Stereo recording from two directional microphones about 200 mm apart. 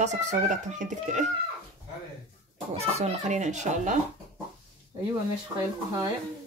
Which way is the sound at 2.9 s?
35° right (ahead or behind).